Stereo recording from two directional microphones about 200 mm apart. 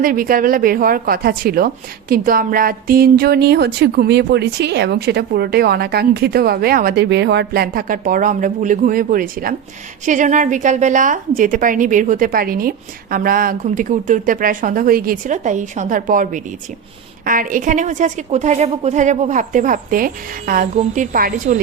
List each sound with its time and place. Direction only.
0.0 s a woman's voice: 45° right (ahead or behind)